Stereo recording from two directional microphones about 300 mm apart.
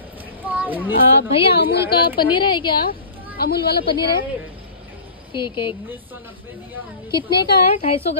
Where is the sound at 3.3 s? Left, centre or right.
Left.